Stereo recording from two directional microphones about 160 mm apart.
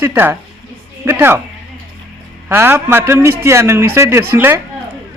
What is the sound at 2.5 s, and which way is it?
Speech, 15° right (ahead or behind).